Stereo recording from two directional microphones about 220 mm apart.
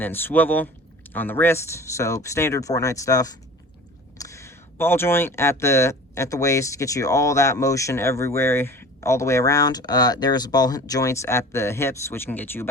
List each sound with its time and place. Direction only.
0.0 s speech: 10° left (ahead or behind)